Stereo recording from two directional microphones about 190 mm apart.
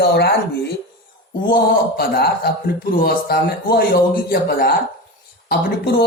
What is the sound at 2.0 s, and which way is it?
Speech, 55° left (ahead or behind).